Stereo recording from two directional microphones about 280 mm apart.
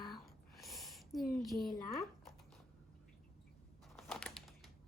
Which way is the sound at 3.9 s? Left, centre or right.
Centre.